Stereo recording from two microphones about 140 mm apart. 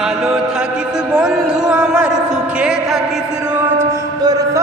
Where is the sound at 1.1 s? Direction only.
5° right (ahead or behind).